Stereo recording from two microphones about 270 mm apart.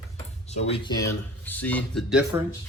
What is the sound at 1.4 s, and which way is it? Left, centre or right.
Speech, centre.